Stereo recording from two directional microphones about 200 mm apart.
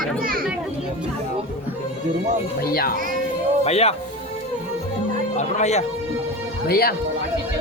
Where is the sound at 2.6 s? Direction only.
50° left (ahead or behind).